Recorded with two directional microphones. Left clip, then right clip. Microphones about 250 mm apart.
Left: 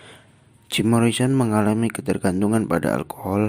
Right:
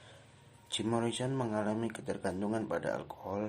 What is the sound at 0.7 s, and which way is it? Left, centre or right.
Speech, left.